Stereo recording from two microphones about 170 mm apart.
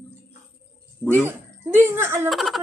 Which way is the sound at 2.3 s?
Centre (ahead or behind).